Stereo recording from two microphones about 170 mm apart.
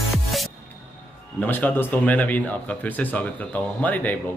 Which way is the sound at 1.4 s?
10° left (ahead or behind).